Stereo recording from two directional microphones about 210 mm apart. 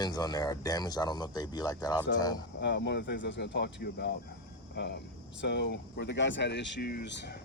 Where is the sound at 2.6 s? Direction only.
55° left (ahead or behind).